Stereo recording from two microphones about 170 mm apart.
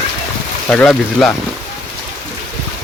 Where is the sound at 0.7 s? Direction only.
5° left (ahead or behind).